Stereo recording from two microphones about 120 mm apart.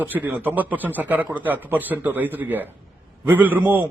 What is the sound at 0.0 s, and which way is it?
A man's voice, 15° right (ahead or behind).